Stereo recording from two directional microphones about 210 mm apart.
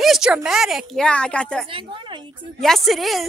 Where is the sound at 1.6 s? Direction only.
25° right (ahead or behind).